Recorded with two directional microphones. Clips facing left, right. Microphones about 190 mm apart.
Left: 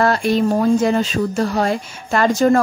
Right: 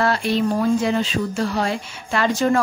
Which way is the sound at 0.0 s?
45° left (ahead or behind).